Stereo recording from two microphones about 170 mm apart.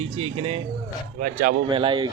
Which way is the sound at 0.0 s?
35° right (ahead or behind).